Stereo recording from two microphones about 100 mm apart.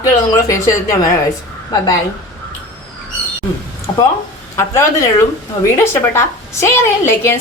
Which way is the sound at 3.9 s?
55° left (ahead or behind).